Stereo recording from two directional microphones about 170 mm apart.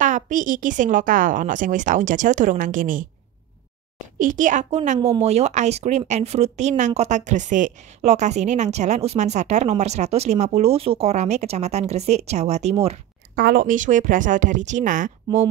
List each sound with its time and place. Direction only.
0.0 s a woman's voice: 50° right (ahead or behind)
4.2 s a woman's voice: 50° right (ahead or behind)
13.4 s a woman's voice: 60° right (ahead or behind)